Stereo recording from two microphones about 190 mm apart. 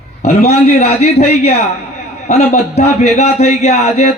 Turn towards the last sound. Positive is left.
turn(degrees=35)  # may be behind; listen again after turning